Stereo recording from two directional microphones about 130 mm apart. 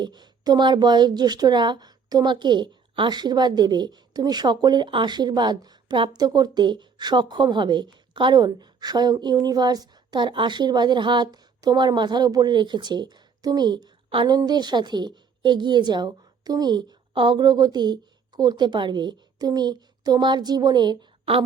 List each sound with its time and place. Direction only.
0.0 s speech: 35° right (ahead or behind)